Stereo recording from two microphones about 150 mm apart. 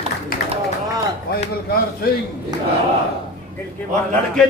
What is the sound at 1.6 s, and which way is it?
Speech, 85° left.